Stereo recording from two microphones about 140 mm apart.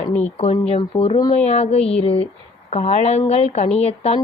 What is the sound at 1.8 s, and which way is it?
Speech, 5° left (ahead or behind).